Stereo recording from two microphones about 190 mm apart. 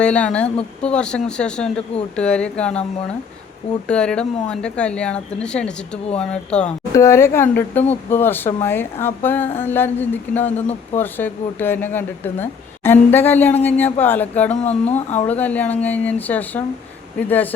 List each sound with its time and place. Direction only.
0.0 s speech: 5° left (ahead or behind)
3.8 s speech: 5° left (ahead or behind)
14.5 s speech: 35° left (ahead or behind)
15.3 s speech: 10° left (ahead or behind)